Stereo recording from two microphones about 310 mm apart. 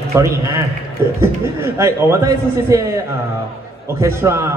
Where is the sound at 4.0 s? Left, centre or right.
Centre.